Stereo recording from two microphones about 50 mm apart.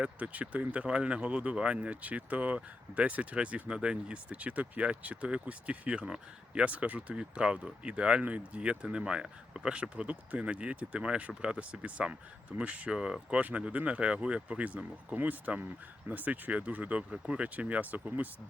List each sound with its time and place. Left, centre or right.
0.0 s speech: right